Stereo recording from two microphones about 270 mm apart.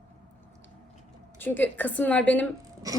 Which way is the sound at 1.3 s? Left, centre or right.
Centre.